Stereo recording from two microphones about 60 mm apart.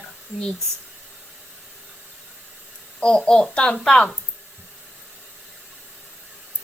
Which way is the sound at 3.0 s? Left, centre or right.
Centre.